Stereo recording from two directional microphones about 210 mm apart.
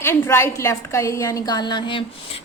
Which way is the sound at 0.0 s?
10° left (ahead or behind).